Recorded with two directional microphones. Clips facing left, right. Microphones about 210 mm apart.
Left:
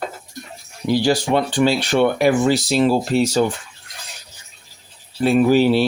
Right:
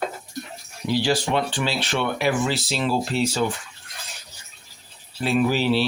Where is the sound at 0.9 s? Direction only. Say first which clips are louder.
Left 5 dB; 45° left (ahead or behind).